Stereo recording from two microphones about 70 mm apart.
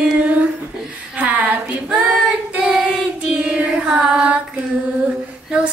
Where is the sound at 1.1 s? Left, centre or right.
Right.